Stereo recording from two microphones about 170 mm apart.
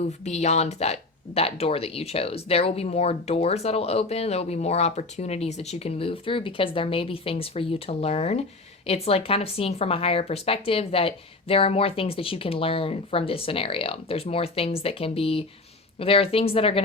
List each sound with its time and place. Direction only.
0.0 s speech: 40° left (ahead or behind)